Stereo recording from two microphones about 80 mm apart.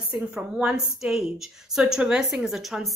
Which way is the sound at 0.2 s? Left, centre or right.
Centre.